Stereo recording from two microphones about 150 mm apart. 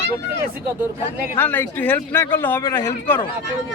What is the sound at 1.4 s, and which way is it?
Speech, 15° left (ahead or behind).